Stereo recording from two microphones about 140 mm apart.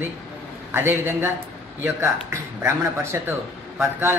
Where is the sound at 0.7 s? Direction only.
15° right (ahead or behind).